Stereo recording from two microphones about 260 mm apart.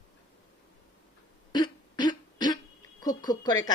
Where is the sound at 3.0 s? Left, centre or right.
Centre.